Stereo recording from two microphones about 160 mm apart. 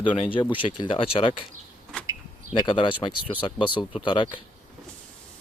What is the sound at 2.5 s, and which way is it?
Speech, 30° left (ahead or behind).